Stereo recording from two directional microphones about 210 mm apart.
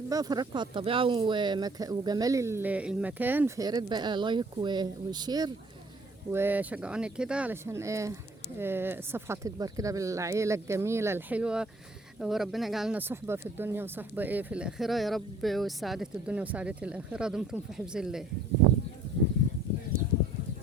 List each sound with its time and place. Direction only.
0.1 s speech: 20° right (ahead or behind); by 18.3 s centre (ahead or behind)